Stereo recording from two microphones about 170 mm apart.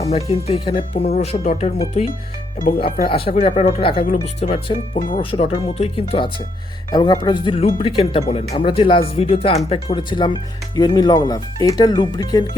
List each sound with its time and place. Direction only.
0.3 s speech: 35° left (ahead or behind)
3.2 s speech: 35° left (ahead or behind)
3.9 s speech: 55° left (ahead or behind)
4.4 s speech: 35° left (ahead or behind)
4.9 s speech: 50° left (ahead or behind)
5.2 s speech: 30° left (ahead or behind)